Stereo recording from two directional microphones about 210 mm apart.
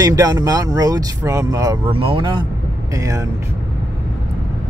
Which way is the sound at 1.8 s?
25° right (ahead or behind).